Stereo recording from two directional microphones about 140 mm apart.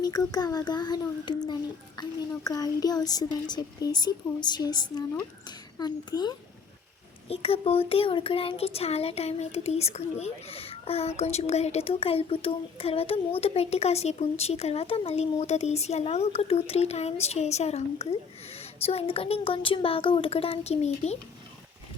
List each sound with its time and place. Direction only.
0.0 s a child's voice: 30° left (ahead or behind)
7.3 s speech: 45° left (ahead or behind)